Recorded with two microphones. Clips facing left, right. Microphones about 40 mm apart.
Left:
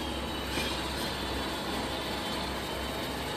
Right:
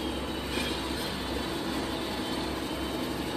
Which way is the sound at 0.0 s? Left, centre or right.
Centre.